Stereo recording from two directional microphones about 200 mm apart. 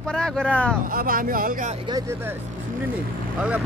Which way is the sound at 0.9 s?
45° right (ahead or behind).